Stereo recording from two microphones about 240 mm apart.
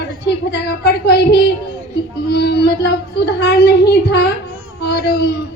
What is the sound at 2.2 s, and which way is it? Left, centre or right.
Child singing, left.